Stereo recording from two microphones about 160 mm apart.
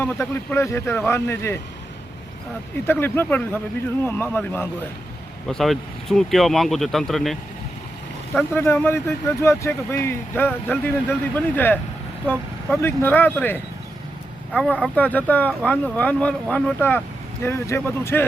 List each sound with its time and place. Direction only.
0.0 s speech: 15° left (ahead or behind)
2.8 s speech: 15° left (ahead or behind)
5.5 s speech: centre (ahead or behind)
8.4 s speech: 15° left (ahead or behind)